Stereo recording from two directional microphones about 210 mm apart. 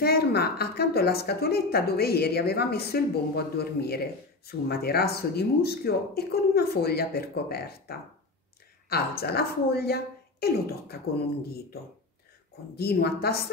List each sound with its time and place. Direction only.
0.0 s a woman's voice: 50° left (ahead or behind)
9.2 s a woman's voice: 50° left (ahead or behind)
12.7 s a woman's voice: 50° left (ahead or behind)